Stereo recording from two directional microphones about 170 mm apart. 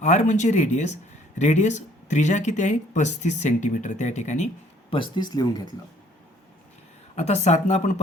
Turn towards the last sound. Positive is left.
turn(degrees=45)  # may be behind; listen again after turning